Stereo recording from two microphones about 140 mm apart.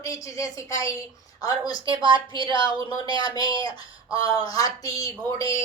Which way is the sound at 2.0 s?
35° right (ahead or behind).